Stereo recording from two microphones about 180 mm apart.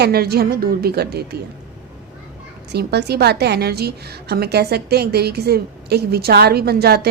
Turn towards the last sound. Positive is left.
turn(degrees=-60)  # may be behind; listen again after turning